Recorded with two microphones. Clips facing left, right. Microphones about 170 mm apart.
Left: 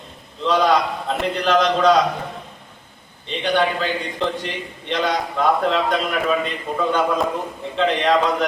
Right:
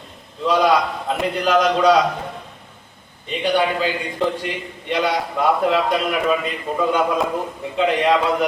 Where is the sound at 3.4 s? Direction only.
10° right (ahead or behind).